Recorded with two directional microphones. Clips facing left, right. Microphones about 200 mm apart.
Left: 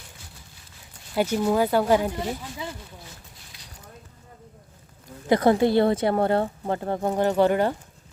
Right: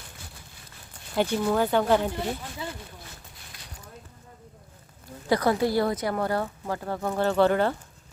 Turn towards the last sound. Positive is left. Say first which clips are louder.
# left 1 dB
turn(degrees=15)  # may be behind; listen again after turning